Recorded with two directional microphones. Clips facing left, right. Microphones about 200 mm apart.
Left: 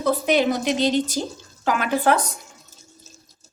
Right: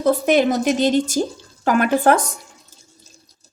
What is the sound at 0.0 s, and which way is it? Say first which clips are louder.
A woman's voice: right 4 dB; 50° right (ahead or behind).